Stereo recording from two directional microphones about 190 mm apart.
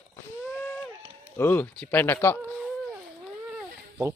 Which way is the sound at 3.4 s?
5° right (ahead or behind).